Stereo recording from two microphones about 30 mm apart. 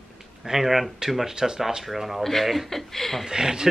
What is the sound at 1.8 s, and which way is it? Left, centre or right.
A woman's voice, centre.